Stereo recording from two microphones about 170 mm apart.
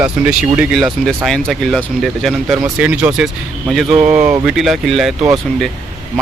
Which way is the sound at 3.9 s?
40° right (ahead or behind).